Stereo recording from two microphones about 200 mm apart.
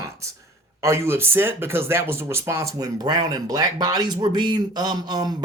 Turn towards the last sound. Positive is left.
turn(degrees=-20)  # may be behind; listen again after turning